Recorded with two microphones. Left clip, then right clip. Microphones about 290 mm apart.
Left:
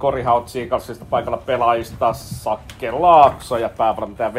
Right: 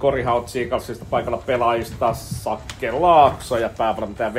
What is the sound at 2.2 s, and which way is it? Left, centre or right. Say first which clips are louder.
Speech: right 1 dB; left.